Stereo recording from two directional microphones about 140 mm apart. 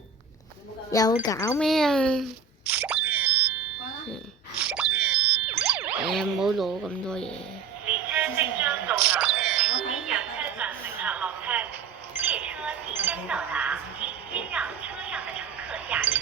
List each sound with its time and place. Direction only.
0.9 s speech: 25° left (ahead or behind)
1.5 s speech: centre (ahead or behind)
2.6 s a sound: 15° right (ahead or behind)
4.5 s boing: 10° right (ahead or behind)
6.1 s speech: centre (ahead or behind)
7.9 s music: 10° right (ahead or behind)
12.1 s a sound: 10° right (ahead or behind)